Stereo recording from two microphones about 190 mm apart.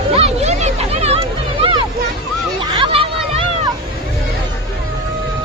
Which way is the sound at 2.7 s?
25° right (ahead or behind).